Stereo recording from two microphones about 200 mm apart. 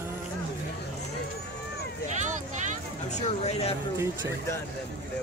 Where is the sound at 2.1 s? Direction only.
35° right (ahead or behind).